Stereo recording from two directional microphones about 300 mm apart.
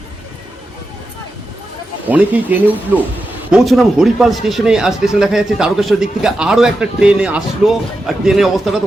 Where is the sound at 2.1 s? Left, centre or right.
Centre.